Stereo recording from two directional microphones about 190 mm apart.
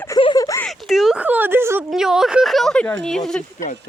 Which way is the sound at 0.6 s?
Centre (ahead or behind).